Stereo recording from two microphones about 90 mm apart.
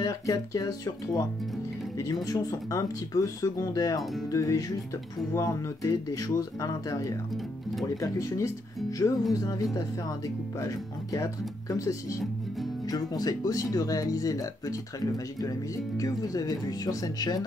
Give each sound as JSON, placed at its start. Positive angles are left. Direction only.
{"t": 0.0, "sound": "speech", "side_deg": 40}
{"t": 2.2, "sound": "speech", "side_deg": 40}
{"t": 16.0, "sound": "speech", "side_deg": 45}